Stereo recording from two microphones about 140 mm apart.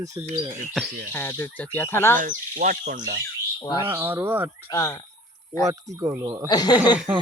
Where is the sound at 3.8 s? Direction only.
15° right (ahead or behind).